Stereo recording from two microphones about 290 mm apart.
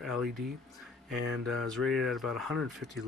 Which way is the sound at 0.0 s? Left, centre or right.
Centre.